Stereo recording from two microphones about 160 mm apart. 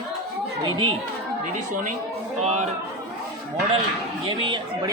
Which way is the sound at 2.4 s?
45° right (ahead or behind).